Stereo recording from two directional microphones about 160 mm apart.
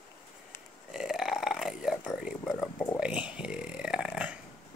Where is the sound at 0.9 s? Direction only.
Centre (ahead or behind).